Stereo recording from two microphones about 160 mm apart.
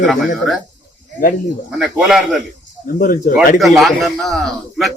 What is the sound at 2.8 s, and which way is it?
Speech, 60° left (ahead or behind).